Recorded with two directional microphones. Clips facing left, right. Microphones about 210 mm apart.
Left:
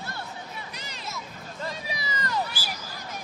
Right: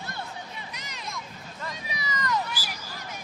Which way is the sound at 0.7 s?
30° left (ahead or behind).